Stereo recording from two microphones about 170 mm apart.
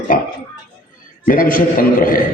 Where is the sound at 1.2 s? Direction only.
55° left (ahead or behind).